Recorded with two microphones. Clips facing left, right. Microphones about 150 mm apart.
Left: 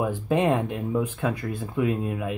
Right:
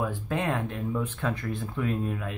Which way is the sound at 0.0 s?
15° left (ahead or behind).